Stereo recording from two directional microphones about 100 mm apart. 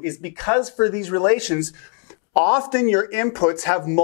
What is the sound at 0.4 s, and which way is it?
Speech, 25° left (ahead or behind).